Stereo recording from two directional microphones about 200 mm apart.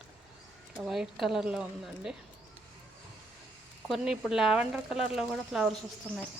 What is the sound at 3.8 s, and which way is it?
Speech, centre (ahead or behind).